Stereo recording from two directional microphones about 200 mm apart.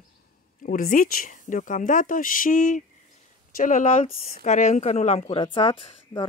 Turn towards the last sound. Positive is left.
turn(degrees=25)  # may be behind; listen again after turning